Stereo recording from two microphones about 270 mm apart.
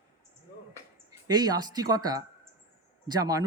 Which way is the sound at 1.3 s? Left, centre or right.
Centre.